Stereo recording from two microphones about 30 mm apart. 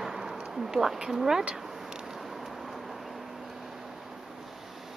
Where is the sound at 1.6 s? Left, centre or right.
Centre.